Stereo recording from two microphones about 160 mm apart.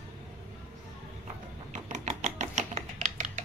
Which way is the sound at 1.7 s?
45° right (ahead or behind).